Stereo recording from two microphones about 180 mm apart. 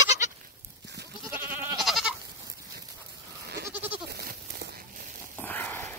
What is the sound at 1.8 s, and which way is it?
Goat, centre (ahead or behind).